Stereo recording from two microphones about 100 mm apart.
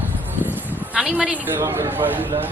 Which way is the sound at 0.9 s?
10° right (ahead or behind).